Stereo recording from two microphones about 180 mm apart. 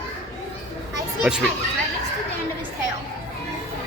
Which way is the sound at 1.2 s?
5° right (ahead or behind).